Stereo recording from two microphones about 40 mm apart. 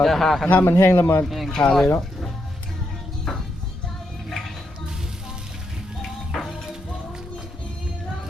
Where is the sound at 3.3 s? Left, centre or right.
Centre.